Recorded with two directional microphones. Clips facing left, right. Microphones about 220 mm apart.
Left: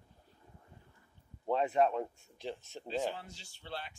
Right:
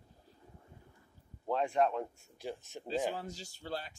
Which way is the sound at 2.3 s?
10° right (ahead or behind).